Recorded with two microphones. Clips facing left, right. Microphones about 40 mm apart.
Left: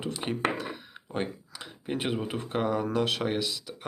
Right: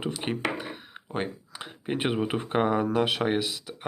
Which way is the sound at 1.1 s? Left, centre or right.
Centre.